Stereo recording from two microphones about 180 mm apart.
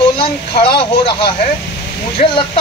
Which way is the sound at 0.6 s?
30° left (ahead or behind).